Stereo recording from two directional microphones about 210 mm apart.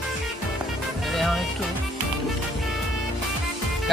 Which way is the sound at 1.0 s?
Centre (ahead or behind).